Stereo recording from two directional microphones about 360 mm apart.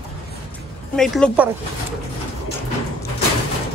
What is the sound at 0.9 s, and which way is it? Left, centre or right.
Speech, centre.